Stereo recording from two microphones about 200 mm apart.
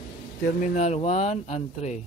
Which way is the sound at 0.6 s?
35° left (ahead or behind).